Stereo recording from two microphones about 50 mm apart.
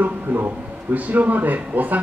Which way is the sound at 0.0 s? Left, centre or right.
Right.